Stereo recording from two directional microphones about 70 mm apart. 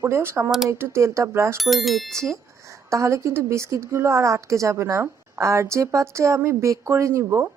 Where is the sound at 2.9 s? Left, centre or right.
Right.